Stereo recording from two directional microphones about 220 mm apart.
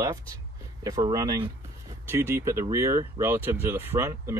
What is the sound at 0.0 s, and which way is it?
Speech, 15° right (ahead or behind).